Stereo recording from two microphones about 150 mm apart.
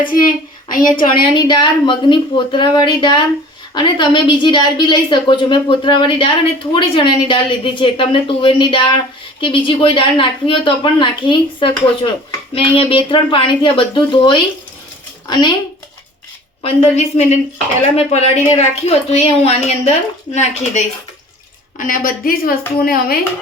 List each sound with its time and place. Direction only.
0.7 s a woman's voice: 70° left (ahead or behind)
1.0 s a woman's voice: 30° left (ahead or behind)
16.6 s a woman's voice: 45° left (ahead or behind)
21.8 s a woman's voice: 65° left (ahead or behind); by 23.1 s 90° left